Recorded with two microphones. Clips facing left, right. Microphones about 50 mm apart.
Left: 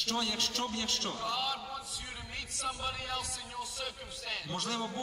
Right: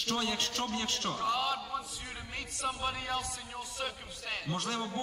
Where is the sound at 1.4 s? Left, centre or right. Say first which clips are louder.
Right 3 dB; right.